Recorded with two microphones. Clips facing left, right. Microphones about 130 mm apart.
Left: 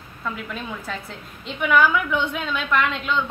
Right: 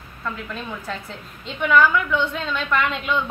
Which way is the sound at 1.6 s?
10° left (ahead or behind).